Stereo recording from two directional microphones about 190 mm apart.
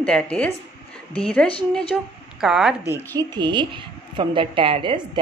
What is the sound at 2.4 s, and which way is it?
Speech, 5° right (ahead or behind).